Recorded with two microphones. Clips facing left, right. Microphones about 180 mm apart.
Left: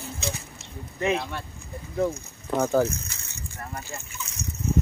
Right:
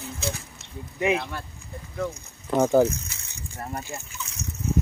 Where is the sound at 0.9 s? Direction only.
10° right (ahead or behind).